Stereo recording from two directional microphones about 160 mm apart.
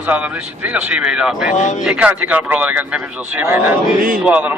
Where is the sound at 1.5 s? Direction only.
50° left (ahead or behind).